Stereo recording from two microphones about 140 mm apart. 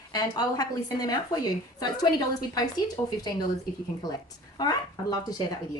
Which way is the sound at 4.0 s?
30° left (ahead or behind).